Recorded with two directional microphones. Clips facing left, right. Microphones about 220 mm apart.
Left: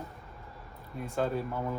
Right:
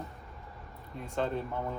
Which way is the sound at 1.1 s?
5° left (ahead or behind).